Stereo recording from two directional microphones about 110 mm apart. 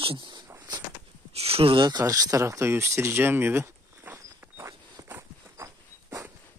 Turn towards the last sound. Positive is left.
turn(degrees=-25)  # may be behind; listen again after turning